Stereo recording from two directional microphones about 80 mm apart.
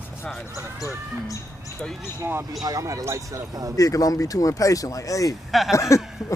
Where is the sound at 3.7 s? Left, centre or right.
Left.